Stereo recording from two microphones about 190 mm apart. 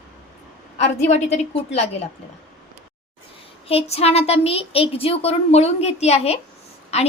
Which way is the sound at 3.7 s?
30° left (ahead or behind).